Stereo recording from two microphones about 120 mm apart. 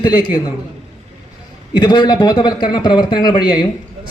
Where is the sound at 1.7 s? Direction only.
40° left (ahead or behind).